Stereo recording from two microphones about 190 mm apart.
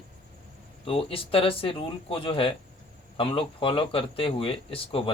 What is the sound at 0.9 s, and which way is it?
Speech, 30° left (ahead or behind).